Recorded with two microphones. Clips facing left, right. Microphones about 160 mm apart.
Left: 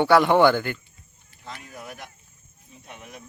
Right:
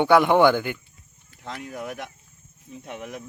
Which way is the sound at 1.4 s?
65° right (ahead or behind).